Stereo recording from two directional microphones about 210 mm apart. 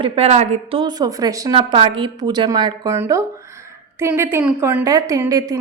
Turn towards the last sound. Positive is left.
turn(degrees=-15)  # may be behind; listen again after turning